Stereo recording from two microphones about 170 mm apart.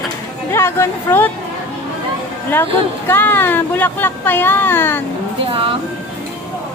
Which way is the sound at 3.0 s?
10° left (ahead or behind).